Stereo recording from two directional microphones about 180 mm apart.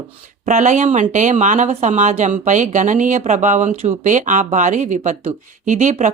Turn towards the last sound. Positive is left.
turn(degrees=-40)  # may be behind; listen again after turning